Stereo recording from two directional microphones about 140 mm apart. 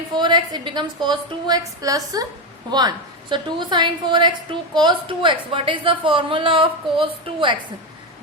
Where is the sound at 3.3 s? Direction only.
35° right (ahead or behind).